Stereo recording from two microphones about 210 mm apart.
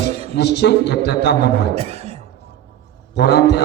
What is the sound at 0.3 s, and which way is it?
A man's voice, 50° left (ahead or behind).